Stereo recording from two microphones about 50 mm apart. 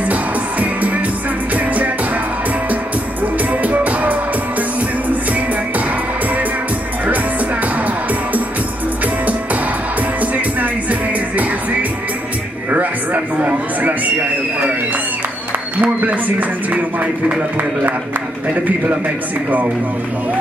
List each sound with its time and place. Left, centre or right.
0.1 s music: right
3.6 s music: right
9.0 s music: right
12.7 s a sound: right
15.8 s a sound: right
18.5 s a man's voice: right